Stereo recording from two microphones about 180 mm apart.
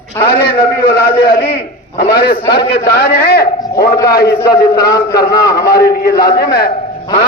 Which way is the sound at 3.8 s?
20° left (ahead or behind).